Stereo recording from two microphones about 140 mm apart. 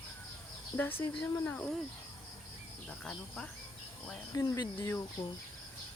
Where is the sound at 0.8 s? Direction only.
15° left (ahead or behind).